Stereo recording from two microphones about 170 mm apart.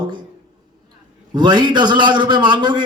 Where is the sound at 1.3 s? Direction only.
25° right (ahead or behind).